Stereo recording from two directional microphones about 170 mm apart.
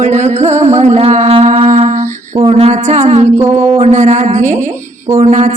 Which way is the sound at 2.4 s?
35° right (ahead or behind).